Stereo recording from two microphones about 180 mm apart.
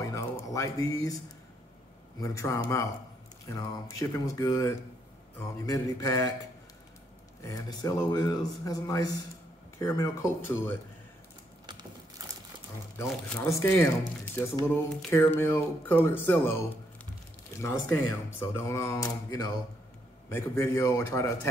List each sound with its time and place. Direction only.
0.0 s a sound: 20° left (ahead or behind)
2.1 s speech: 15° left (ahead or behind)
7.4 s speech: 20° left (ahead or behind)
12.9 s speech: 15° left (ahead or behind)